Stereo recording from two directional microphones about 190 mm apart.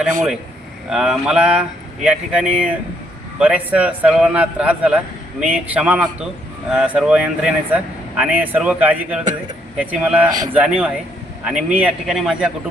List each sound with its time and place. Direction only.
0.9 s a man's voice: 5° right (ahead or behind)